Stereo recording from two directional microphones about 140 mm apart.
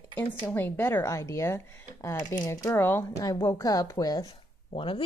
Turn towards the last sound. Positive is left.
turn(degrees=40)  # may be behind; listen again after turning